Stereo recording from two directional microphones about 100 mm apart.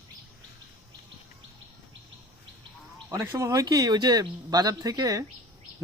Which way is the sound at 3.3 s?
35° right (ahead or behind).